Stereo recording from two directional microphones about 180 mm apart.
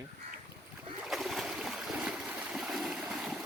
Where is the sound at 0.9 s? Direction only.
Centre (ahead or behind).